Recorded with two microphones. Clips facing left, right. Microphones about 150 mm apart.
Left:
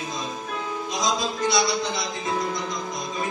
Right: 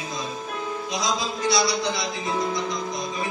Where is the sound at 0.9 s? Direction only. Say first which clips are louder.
Left 2 dB; 45° left (ahead or behind).